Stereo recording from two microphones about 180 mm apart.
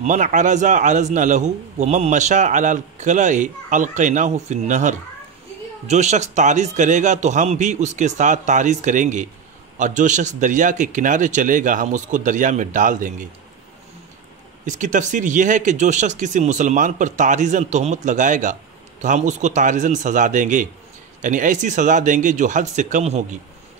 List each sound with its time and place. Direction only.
0.0 s a man's voice: 45° right (ahead or behind)
14.7 s speech: 45° right (ahead or behind)